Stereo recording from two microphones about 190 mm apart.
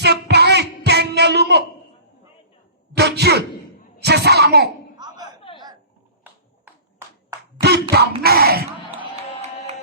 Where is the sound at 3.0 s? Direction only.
60° right (ahead or behind).